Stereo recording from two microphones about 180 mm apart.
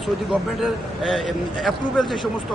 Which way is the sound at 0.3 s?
Centre (ahead or behind).